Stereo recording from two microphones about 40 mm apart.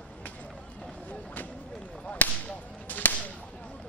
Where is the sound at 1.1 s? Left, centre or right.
Left.